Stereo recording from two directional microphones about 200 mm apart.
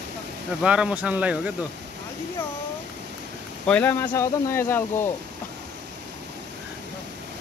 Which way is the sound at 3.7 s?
10° left (ahead or behind).